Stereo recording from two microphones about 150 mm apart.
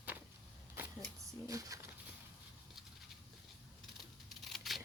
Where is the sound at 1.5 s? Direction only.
20° right (ahead or behind).